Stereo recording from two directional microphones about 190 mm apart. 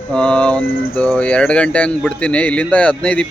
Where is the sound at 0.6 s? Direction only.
50° left (ahead or behind).